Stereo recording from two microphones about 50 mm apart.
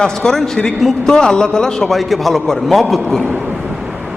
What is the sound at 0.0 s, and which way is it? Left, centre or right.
A man's voice, centre.